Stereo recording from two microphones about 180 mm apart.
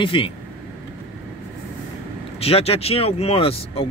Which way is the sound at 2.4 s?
35° left (ahead or behind).